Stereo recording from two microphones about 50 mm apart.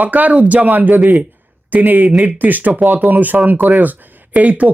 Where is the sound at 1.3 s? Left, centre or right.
Right.